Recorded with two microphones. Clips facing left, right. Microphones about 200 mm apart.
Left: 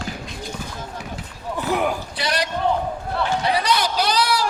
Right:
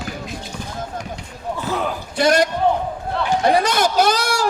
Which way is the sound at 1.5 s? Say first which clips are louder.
Left 2 dB; 15° left (ahead or behind).